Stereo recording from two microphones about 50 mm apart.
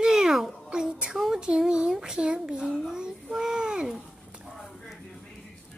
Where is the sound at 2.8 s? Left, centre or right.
Centre.